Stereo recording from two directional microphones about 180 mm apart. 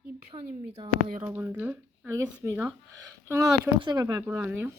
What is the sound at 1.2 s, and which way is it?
A woman's voice, 15° right (ahead or behind).